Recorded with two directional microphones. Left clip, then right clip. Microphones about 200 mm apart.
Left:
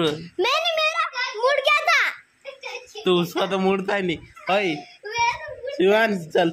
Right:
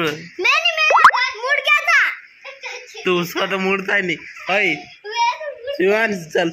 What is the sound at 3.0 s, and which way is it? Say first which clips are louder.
A man's voice: right 2 dB; 5° left (ahead or behind).